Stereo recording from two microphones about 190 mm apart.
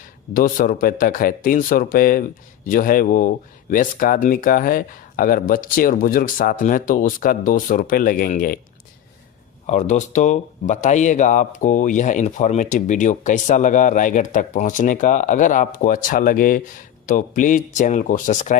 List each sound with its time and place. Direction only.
0.3 s speech: 45° left (ahead or behind)
9.6 s speech: 40° left (ahead or behind)